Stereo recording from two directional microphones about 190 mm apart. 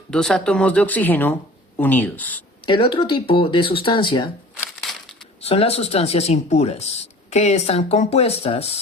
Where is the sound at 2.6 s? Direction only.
25° left (ahead or behind).